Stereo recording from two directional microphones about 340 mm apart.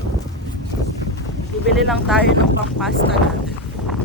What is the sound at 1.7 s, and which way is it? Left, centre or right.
Speech, centre.